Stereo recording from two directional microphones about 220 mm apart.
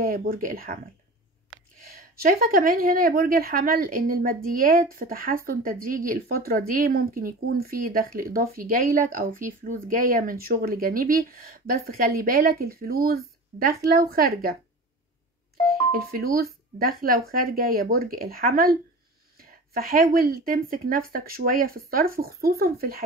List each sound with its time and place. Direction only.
0.0 s a woman's voice: 40° right (ahead or behind)
2.0 s a woman's voice: 45° right (ahead or behind)
15.9 s speech: 45° right (ahead or behind)